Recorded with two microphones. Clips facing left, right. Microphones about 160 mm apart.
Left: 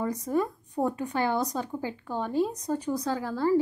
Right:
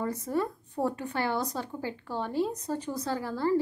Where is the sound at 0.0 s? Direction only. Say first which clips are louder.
Left 2 dB; 15° left (ahead or behind).